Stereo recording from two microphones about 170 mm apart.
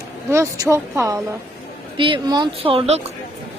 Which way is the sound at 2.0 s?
25° right (ahead or behind).